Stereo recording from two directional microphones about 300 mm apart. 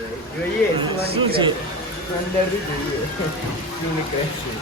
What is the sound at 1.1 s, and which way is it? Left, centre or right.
Speech, centre.